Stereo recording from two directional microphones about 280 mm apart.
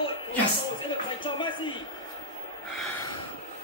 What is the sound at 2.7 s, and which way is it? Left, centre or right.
Snort, left.